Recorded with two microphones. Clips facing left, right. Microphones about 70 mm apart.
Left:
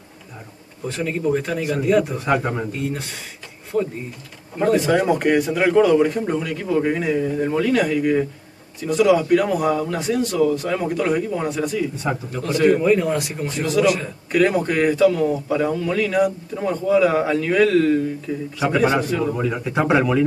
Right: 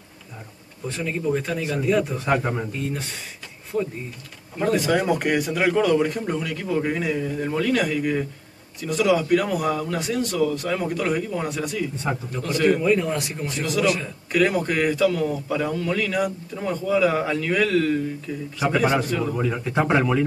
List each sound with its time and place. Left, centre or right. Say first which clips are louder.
0.8 s a man's voice: left 3 dB; centre
3.7 s a man's voice: left 3 dB; centre
18.3 s a man's voice: left 4 dB; left
18.6 s a man's voice: left 2 dB; centre